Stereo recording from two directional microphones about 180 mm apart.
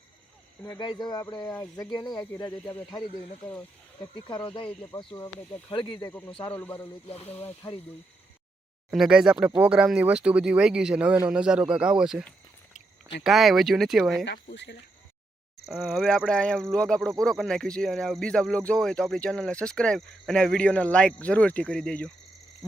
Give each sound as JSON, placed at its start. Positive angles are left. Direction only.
{"t": 0.6, "sound": "speech", "side_deg": 20}
{"t": 4.1, "sound": "speech", "side_deg": 25}
{"t": 6.1, "sound": "speech", "side_deg": 10}
{"t": 7.1, "sound": "speech", "side_deg": 35}
{"t": 7.3, "sound": "speech", "side_deg": 10}
{"t": 8.9, "sound": "speech", "side_deg": -5}
{"t": 13.2, "sound": "speech", "side_deg": 0}
{"t": 14.5, "sound": "speech", "side_deg": 75}
{"t": 15.6, "sound": "speech", "side_deg": 0}